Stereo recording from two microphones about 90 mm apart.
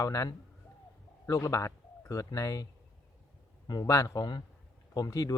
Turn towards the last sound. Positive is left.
turn(degrees=40)  # may be behind; listen again after turning